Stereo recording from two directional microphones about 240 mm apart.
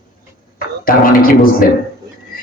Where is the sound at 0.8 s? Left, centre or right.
Left.